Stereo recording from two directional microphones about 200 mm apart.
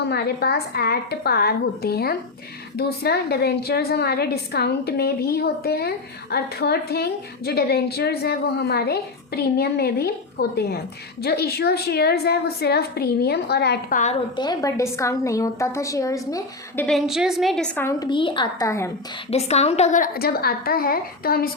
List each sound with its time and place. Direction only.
0.1 s a woman's voice: 50° left (ahead or behind)
14.3 s a woman's voice: 20° left (ahead or behind)
16.8 s a woman's voice: centre (ahead or behind)
18.1 s a woman's voice: 25° left (ahead or behind)
19.3 s a woman's voice: 30° left (ahead or behind); by 21.5 s 50° left (ahead or behind)